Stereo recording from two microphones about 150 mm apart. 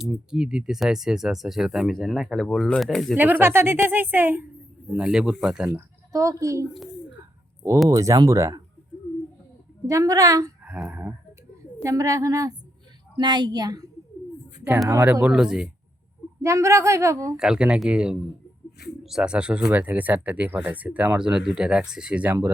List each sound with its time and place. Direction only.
0.0 s speech: 5° right (ahead or behind)
3.2 s speech: 15° right (ahead or behind)
5.6 s speech: 20° right (ahead or behind)
7.9 s a woman's voice: 20° right (ahead or behind)
9.8 s a woman's voice: 20° right (ahead or behind)
10.6 s a sound: 10° right (ahead or behind)
11.8 s a woman's voice: 20° right (ahead or behind)
14.8 s speech: 15° right (ahead or behind)
16.4 s a woman's voice: 20° right (ahead or behind)
17.3 s speech: 5° right (ahead or behind)